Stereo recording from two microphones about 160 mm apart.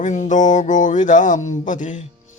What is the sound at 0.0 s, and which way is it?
Speech, 50° left (ahead or behind).